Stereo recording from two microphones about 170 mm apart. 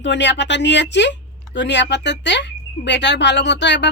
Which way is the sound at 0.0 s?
90° left.